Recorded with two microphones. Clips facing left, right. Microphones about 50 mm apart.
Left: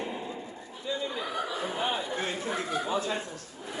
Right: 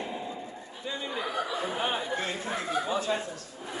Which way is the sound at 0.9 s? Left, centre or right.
Right.